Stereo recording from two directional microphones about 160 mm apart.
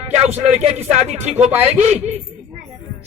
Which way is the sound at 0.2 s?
40° right (ahead or behind).